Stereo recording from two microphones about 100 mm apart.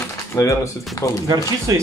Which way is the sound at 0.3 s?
30° left (ahead or behind).